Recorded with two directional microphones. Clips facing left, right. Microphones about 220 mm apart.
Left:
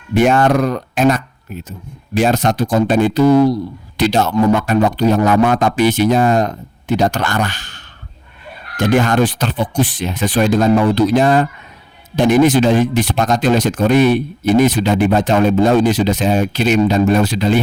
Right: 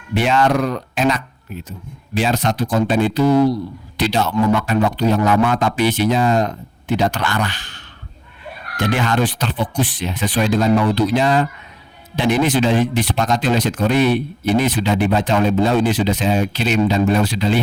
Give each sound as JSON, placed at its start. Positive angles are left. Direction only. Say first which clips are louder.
{"t": 0.1, "sound": "speech", "louder": "left 4 dB", "side_deg": 50}